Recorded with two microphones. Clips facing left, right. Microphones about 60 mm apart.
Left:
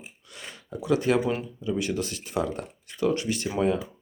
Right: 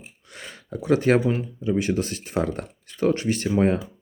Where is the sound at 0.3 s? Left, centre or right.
Right.